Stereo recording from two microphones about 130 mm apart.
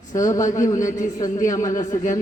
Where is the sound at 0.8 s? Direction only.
80° left.